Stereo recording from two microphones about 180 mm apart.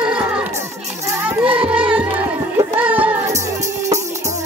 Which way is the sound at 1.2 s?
10° right (ahead or behind).